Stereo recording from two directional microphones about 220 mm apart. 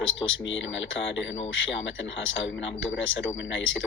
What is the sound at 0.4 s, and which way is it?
Speech, 60° left (ahead or behind).